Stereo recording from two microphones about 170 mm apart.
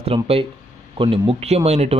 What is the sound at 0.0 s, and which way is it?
Speech, 35° right (ahead or behind).